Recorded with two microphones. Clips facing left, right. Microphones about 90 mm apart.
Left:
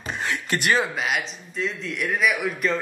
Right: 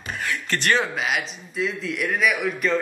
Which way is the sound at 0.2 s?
20° left (ahead or behind).